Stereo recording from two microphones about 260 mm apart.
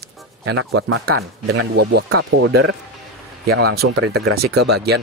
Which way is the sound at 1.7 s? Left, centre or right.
Right.